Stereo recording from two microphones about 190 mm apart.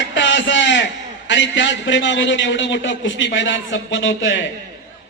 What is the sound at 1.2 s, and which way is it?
A man's voice, 75° left (ahead or behind).